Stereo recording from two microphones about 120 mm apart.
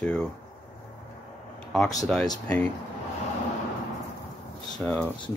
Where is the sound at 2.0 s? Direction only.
Centre (ahead or behind).